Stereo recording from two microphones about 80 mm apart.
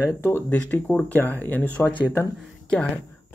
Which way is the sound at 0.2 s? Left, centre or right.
Left.